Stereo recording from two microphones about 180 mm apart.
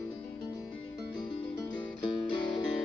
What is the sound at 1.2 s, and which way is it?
Music, 20° left (ahead or behind).